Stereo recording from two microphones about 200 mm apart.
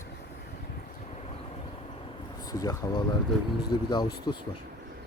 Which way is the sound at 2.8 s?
15° left (ahead or behind).